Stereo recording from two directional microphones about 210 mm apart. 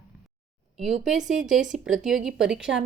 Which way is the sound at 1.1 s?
Centre (ahead or behind).